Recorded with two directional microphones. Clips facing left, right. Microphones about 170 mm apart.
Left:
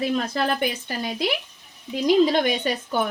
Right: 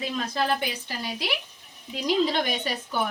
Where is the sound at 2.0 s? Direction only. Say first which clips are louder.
Left 6 dB; 50° left (ahead or behind).